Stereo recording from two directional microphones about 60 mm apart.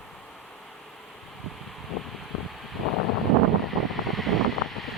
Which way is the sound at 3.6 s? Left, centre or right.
Centre.